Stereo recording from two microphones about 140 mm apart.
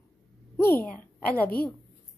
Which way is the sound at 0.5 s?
15° left (ahead or behind).